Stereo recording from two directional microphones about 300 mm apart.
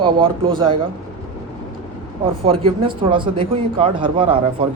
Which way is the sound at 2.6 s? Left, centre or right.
Centre.